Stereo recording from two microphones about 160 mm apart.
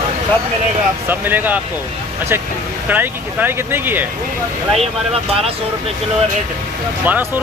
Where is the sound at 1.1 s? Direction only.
10° right (ahead or behind).